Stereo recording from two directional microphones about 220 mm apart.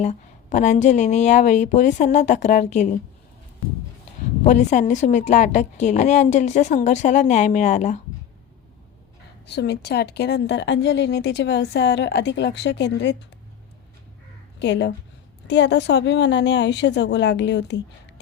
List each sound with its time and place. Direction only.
0.0 s a woman's voice: 30° left (ahead or behind)
4.4 s a woman's voice: 35° left (ahead or behind)
9.5 s a woman's voice: 50° left (ahead or behind)
14.6 s a woman's voice: 50° left (ahead or behind)